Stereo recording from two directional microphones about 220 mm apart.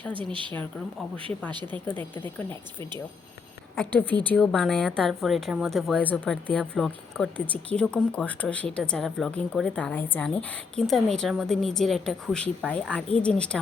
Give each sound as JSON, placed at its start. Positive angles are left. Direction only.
{"t": 1.5, "sound": "speech", "side_deg": -20}
{"t": 1.7, "sound": "speech", "side_deg": 10}
{"t": 3.8, "sound": "speech", "side_deg": 10}